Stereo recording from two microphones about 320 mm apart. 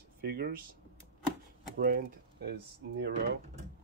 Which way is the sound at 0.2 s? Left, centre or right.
Right.